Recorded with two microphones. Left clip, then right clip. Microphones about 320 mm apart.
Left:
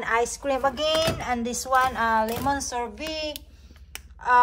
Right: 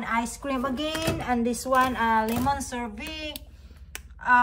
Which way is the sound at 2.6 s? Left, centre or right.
Centre.